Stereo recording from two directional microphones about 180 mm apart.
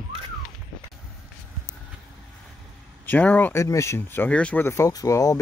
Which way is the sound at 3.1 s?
10° left (ahead or behind).